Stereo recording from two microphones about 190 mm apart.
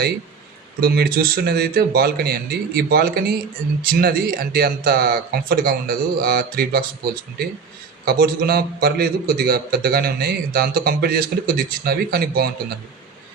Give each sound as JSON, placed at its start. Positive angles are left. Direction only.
{"t": 0.8, "sound": "a man's voice", "side_deg": -55}